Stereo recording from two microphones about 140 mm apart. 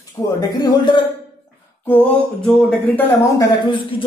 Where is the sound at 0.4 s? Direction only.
30° left (ahead or behind).